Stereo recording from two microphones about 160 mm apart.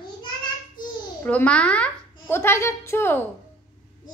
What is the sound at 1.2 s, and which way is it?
A child's voice, 10° left (ahead or behind).